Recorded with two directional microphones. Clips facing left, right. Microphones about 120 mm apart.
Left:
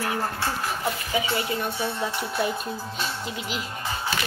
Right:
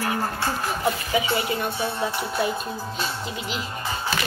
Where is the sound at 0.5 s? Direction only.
20° right (ahead or behind).